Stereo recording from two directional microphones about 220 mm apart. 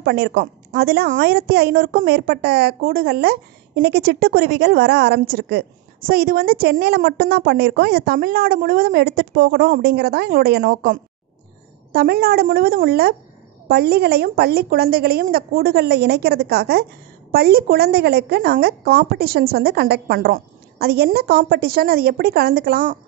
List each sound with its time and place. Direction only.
0.0 s a woman's voice: 50° right (ahead or behind)